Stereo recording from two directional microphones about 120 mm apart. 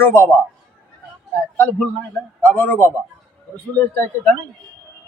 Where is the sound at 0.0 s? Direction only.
20° left (ahead or behind).